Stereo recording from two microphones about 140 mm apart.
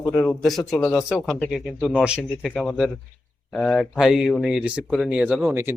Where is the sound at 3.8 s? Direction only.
Centre (ahead or behind).